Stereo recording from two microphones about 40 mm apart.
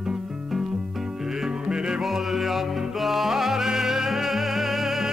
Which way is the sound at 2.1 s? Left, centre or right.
Centre.